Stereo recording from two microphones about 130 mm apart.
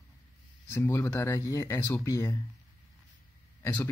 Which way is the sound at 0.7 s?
20° left (ahead or behind).